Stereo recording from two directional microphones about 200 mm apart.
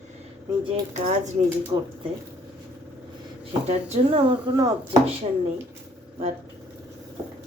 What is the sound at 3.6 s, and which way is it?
Speech, 30° right (ahead or behind).